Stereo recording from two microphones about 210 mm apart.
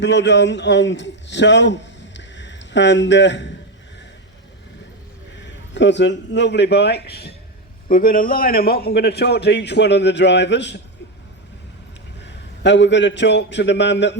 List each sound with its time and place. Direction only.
0.0 s a man's voice: 55° left (ahead or behind)
5.4 s a man's voice: 55° left (ahead or behind)
12.2 s a man's voice: 55° left (ahead or behind)